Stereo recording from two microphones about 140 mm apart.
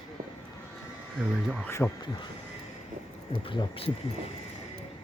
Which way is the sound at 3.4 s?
40° left (ahead or behind).